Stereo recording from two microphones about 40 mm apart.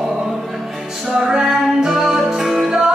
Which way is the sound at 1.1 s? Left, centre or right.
Centre.